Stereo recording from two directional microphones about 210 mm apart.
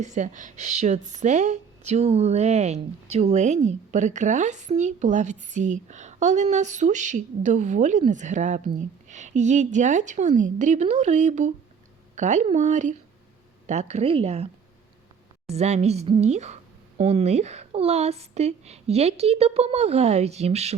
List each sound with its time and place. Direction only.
0.0 s speech: 35° right (ahead or behind)